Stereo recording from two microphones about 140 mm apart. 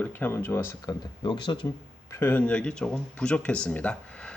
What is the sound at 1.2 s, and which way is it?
Speech, 35° left (ahead or behind).